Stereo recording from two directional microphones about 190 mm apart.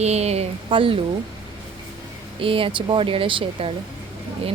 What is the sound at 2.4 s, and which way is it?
A woman's voice, 30° right (ahead or behind).